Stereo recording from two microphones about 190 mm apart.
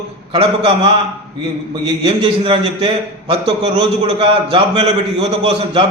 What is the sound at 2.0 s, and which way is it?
A man's voice, 25° right (ahead or behind).